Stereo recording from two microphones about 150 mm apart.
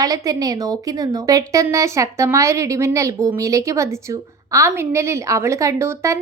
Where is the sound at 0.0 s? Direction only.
25° right (ahead or behind).